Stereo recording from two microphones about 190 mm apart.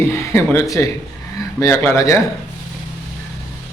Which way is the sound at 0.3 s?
15° left (ahead or behind).